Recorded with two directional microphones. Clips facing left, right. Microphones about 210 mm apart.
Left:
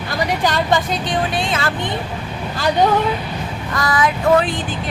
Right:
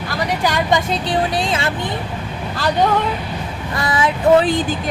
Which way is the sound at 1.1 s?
35° right (ahead or behind).